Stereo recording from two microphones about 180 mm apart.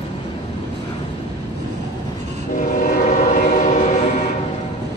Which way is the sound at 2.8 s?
50° left (ahead or behind).